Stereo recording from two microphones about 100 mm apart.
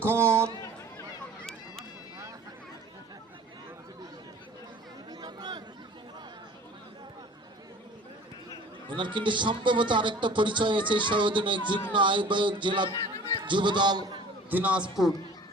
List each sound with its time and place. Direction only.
0.0 s speech: 25° right (ahead or behind)
1.4 s run: 5° left (ahead or behind)
5.2 s a sound: 45° right (ahead or behind)
8.9 s a man's voice: 50° right (ahead or behind)
14.5 s a man's voice: 15° right (ahead or behind)